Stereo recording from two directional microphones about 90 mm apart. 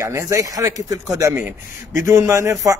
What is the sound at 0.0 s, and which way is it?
Speech, 35° right (ahead or behind).